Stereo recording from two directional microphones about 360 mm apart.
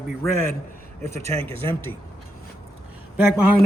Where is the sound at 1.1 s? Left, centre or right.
Centre.